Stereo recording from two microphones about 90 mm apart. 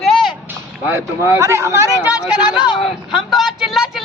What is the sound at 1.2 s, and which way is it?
Speech, 30° right (ahead or behind).